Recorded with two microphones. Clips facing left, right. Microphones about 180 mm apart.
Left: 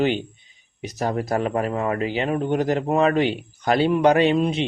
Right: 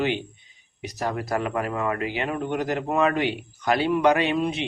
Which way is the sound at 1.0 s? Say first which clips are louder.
Left 4 dB; 25° left (ahead or behind).